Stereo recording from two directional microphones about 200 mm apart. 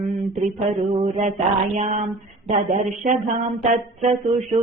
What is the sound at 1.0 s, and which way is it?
Speech, 35° right (ahead or behind).